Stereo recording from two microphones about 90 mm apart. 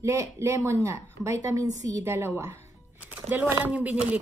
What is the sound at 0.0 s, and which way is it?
A woman's voice, 35° right (ahead or behind).